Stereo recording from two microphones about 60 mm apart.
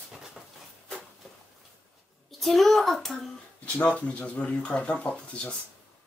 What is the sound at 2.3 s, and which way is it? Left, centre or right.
Speech, centre.